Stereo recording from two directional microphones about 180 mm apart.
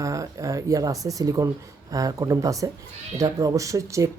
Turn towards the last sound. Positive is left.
turn(degrees=-15)  # may be behind; listen again after turning